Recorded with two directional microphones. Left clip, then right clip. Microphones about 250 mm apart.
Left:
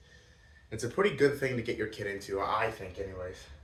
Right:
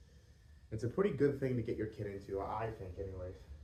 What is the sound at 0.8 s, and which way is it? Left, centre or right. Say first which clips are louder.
Speech: left 7 dB; centre.